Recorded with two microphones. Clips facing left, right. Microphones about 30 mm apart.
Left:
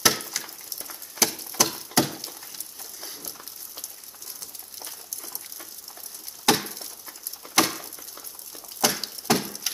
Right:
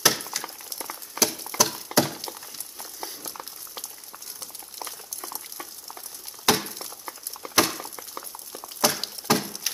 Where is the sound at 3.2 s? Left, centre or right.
Right.